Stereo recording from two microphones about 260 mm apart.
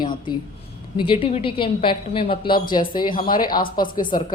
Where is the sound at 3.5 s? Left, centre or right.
Left.